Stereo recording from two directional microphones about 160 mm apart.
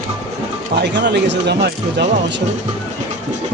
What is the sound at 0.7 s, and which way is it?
Speech, 90° right.